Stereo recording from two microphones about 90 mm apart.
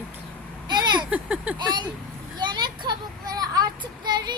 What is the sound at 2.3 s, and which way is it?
Child singing, 55° right (ahead or behind).